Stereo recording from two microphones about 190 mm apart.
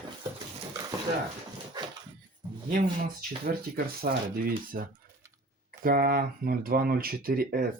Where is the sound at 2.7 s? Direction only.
50° right (ahead or behind).